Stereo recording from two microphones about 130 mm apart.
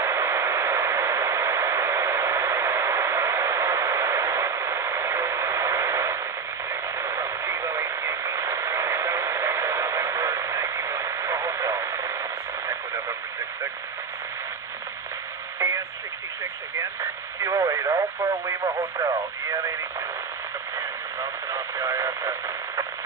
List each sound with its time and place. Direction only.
0.0 s white noise: 20° right (ahead or behind)
6.7 s radio: 20° right (ahead or behind)
15.6 s radio: 25° right (ahead or behind)
17.4 s radio: 25° right (ahead or behind)
21.2 s radio: 25° right (ahead or behind)